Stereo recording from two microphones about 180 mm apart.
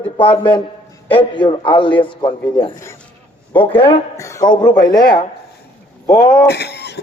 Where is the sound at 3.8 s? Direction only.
30° left (ahead or behind).